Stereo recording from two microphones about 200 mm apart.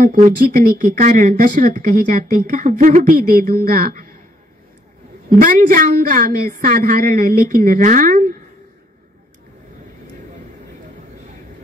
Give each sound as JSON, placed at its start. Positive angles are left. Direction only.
{"t": 0.0, "sound": "speech", "side_deg": -45}
{"t": 5.4, "sound": "speech", "side_deg": -45}